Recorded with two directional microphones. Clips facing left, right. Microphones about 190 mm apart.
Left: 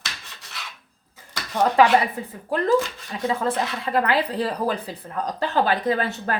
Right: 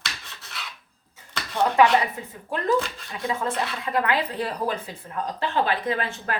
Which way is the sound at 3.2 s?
35° left (ahead or behind).